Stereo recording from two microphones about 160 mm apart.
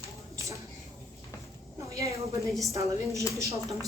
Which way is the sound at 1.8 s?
20° right (ahead or behind).